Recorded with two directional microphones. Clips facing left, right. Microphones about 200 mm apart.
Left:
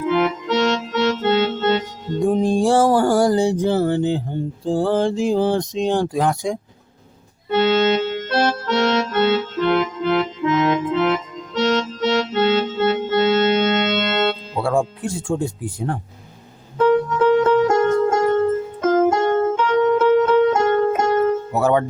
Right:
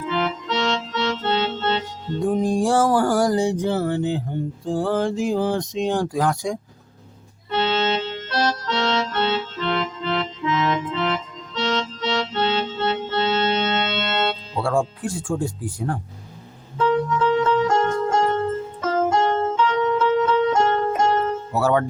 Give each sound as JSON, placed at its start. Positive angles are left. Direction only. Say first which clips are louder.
{"t": 0.0, "sound": "music", "louder": "left 6 dB", "side_deg": 50}
{"t": 2.2, "sound": "music", "louder": "left 3 dB", "side_deg": 25}
{"t": 4.6, "sound": "speech", "louder": "left 4 dB", "side_deg": 30}
{"t": 7.5, "sound": "accordion", "louder": "left 6 dB", "side_deg": 50}
{"t": 14.6, "sound": "speech", "louder": "left 2 dB", "side_deg": 20}
{"t": 16.7, "sound": "music", "louder": "left 4 dB", "side_deg": 50}
{"t": 21.5, "sound": "speech", "louder": "right 2 dB", "side_deg": 20}